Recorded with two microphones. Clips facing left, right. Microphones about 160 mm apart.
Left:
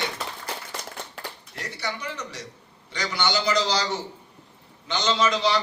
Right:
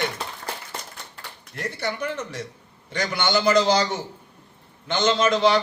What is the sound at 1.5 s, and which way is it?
A man's voice, 55° right (ahead or behind).